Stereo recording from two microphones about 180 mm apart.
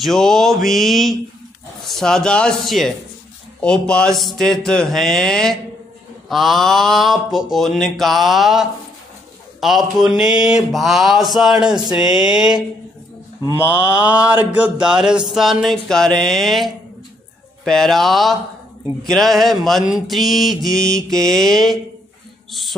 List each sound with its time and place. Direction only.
0.0 s speech: centre (ahead or behind)
13.4 s mantra: 20° left (ahead or behind)
14.5 s speech: 5° right (ahead or behind)